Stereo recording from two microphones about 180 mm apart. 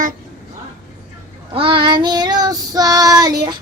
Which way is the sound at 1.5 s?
30° right (ahead or behind).